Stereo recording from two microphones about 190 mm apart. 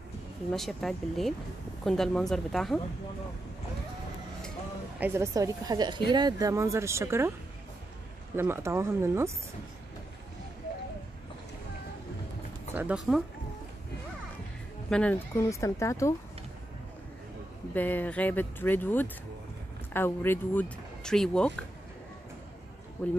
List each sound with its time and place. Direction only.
0.5 s speech: centre (ahead or behind)
5.0 s speech: 15° right (ahead or behind)
8.4 s speech: 15° right (ahead or behind)
12.7 s speech: 5° right (ahead or behind)
14.9 s speech: 5° left (ahead or behind)
17.7 s speech: 10° left (ahead or behind)
23.0 s speech: 10° left (ahead or behind)